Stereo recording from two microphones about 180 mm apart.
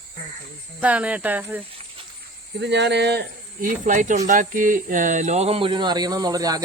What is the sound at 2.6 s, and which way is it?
Speech, 70° right (ahead or behind).